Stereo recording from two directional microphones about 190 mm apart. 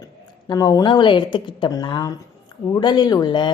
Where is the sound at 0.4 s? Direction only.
20° left (ahead or behind).